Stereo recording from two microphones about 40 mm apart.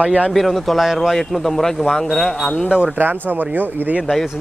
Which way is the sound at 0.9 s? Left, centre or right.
Centre.